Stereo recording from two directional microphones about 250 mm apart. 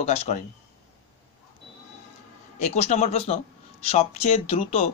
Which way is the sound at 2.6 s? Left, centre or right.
Left.